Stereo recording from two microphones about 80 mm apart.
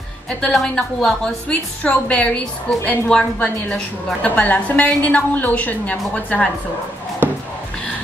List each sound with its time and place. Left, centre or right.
0.5 s a woman's voice: centre